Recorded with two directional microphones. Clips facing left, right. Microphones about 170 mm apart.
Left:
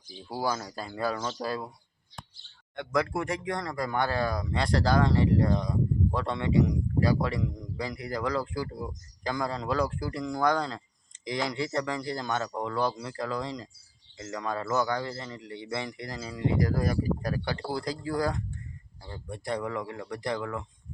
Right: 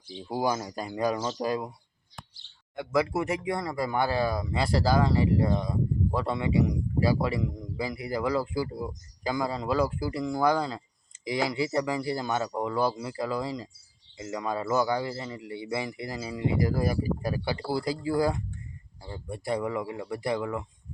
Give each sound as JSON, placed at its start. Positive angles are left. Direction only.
{"t": 0.1, "sound": "a man's voice", "side_deg": -20}
{"t": 2.7, "sound": "a man's voice", "side_deg": -5}